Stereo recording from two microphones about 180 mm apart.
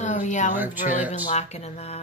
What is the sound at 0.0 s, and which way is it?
Speech, 45° left (ahead or behind).